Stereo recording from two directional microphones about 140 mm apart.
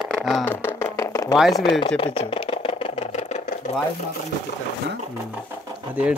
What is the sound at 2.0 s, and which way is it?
Sewing machine, 45° left (ahead or behind).